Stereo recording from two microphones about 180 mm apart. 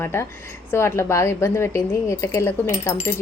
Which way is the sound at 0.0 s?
15° left (ahead or behind).